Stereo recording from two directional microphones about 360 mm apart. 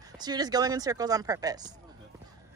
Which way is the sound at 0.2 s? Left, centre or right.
Centre.